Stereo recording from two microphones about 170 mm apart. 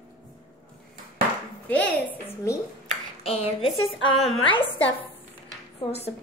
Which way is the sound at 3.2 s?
35° left (ahead or behind).